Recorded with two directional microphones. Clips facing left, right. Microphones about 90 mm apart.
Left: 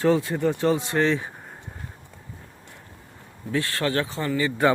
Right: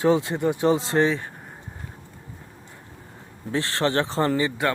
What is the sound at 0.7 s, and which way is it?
Speech, 30° right (ahead or behind).